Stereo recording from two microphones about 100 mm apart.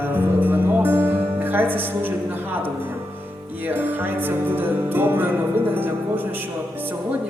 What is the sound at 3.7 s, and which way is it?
Speech, 20° right (ahead or behind).